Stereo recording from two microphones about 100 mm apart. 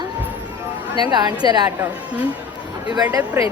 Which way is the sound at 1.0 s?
45° right (ahead or behind).